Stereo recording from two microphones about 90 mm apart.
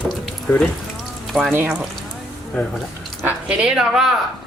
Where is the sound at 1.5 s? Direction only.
25° right (ahead or behind).